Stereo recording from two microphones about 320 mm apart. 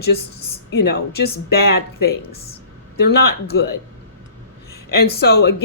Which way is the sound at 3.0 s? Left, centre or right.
Left.